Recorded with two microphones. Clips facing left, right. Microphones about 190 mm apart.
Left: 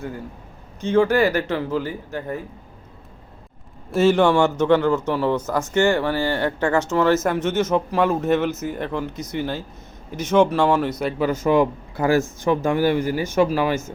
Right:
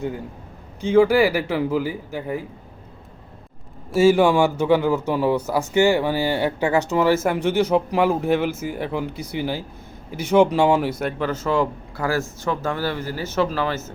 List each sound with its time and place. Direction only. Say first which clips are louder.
0.8 s speech: right 2 dB; 10° right (ahead or behind)
3.9 s speech: right 1 dB; 5° right (ahead or behind)
11.2 s speech: left 5 dB; 10° left (ahead or behind)